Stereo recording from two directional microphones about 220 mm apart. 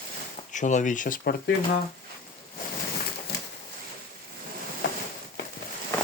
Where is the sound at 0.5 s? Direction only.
35° left (ahead or behind).